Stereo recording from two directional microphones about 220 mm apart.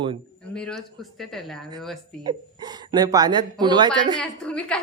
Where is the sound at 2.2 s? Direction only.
20° right (ahead or behind).